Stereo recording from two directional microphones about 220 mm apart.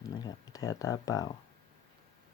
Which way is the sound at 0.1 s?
15° left (ahead or behind).